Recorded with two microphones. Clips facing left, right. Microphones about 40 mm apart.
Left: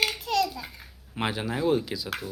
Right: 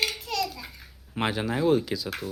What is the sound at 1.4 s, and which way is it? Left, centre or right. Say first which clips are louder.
Speech: right 2 dB; centre.